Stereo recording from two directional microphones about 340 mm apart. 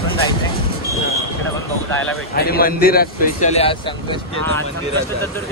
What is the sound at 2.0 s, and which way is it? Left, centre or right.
A man's voice, left.